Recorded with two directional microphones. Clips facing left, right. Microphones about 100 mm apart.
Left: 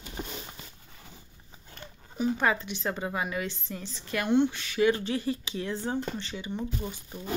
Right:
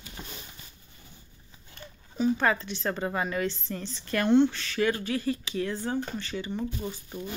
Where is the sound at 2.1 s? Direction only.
15° left (ahead or behind).